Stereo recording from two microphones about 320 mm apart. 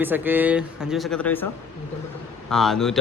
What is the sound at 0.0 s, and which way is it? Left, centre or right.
Speech, centre.